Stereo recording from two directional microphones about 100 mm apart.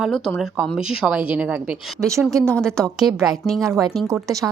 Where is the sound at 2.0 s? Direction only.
30° right (ahead or behind).